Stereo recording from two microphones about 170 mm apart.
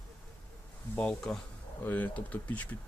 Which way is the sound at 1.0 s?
5° left (ahead or behind).